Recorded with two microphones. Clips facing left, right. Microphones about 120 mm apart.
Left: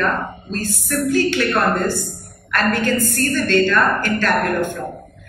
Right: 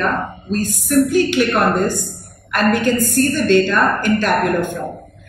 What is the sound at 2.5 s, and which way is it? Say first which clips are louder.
A woman's voice: right 3 dB; 15° right (ahead or behind).